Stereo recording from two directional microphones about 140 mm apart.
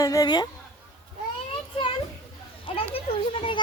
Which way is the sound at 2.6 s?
40° left (ahead or behind).